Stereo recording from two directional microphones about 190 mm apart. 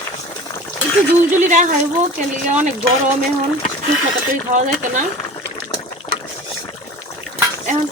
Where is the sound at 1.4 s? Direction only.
40° right (ahead or behind).